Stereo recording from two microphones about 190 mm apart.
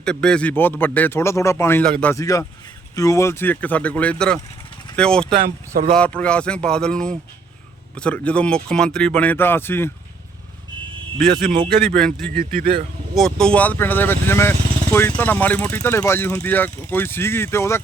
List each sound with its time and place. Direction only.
0.0 s speech: 5° left (ahead or behind)
5.4 s speech: 45° right (ahead or behind)
5.9 s a man's voice: 5° left (ahead or behind)
11.3 s speech: 50° right (ahead or behind)
11.9 s a man's voice: 5° left (ahead or behind)
12.5 s speech: 50° right (ahead or behind)
13.1 s speech: 5° left (ahead or behind)